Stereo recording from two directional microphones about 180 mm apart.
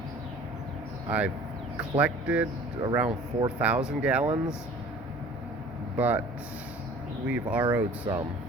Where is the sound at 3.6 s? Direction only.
5° right (ahead or behind).